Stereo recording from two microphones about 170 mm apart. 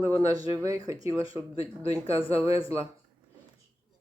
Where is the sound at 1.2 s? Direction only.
30° left (ahead or behind).